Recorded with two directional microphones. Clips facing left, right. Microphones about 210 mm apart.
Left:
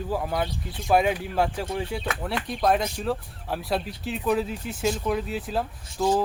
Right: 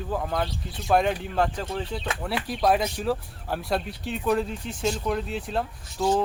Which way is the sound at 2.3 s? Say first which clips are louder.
Right 1 dB; centre (ahead or behind).